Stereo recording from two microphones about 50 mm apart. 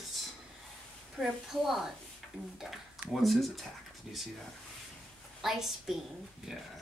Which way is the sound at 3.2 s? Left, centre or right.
Centre.